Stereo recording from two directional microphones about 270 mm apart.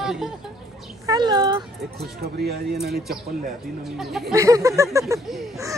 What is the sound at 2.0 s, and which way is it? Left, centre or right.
Speech, right.